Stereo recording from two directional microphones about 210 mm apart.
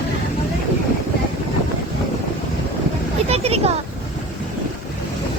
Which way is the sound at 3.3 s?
30° right (ahead or behind).